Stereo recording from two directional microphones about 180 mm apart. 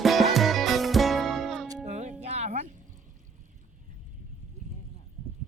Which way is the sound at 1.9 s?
40° right (ahead or behind).